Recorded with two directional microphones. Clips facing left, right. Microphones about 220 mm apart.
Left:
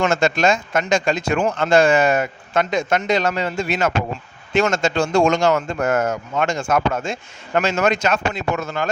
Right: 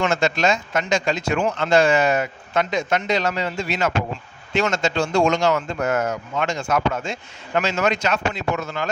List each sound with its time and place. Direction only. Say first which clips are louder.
0.0 s a man's voice: left 3 dB; 50° left (ahead or behind)